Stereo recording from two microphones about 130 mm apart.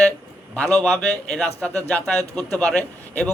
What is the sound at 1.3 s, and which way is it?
A man's voice, 10° left (ahead or behind).